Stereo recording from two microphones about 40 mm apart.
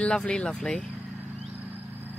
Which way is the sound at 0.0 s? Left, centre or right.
Left.